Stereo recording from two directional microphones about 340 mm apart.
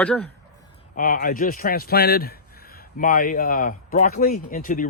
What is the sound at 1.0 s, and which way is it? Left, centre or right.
A man's voice, left.